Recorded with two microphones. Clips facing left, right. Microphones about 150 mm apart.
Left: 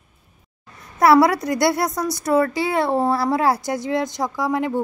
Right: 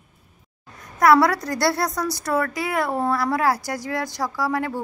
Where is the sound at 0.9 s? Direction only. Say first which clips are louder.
Left 2 dB; 25° left (ahead or behind).